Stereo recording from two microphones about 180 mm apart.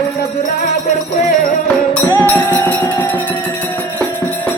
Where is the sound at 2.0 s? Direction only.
10° left (ahead or behind).